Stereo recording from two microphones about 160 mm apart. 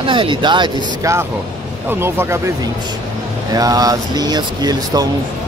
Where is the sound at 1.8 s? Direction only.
15° right (ahead or behind).